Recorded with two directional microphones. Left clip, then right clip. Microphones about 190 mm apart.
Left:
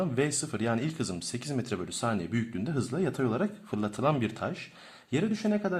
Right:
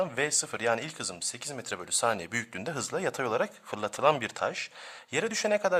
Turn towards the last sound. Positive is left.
turn(degrees=-40)  # may be behind; listen again after turning